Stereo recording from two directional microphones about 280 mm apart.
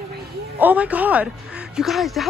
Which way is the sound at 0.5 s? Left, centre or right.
Centre.